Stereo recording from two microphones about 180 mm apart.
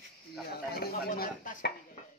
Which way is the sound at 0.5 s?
60° left (ahead or behind).